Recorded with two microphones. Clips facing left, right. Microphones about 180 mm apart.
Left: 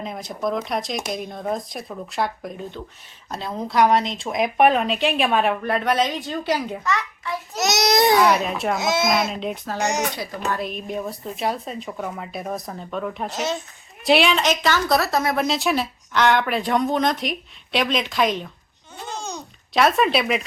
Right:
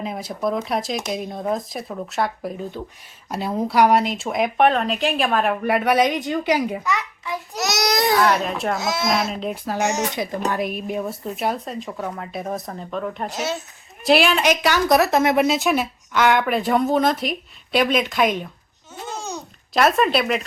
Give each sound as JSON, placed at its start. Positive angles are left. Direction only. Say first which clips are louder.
{"t": 0.0, "sound": "speech", "louder": "right 2 dB", "side_deg": -5}
{"t": 5.6, "sound": "a child's voice", "louder": "right 3 dB", "side_deg": -10}
{"t": 7.5, "sound": "a sound", "louder": "left 2 dB", "side_deg": 20}
{"t": 8.2, "sound": "speech", "louder": "left 1 dB", "side_deg": 5}
{"t": 8.8, "sound": "speech", "louder": "left 3 dB", "side_deg": 20}
{"t": 9.2, "sound": "speech", "louder": "even", "side_deg": 0}
{"t": 10.5, "sound": "a child's voice", "louder": "right 2 dB", "side_deg": -10}
{"t": 15.4, "sound": "speech", "louder": "right 2 dB", "side_deg": 0}
{"t": 19.7, "sound": "speech", "louder": "right 1 dB", "side_deg": 0}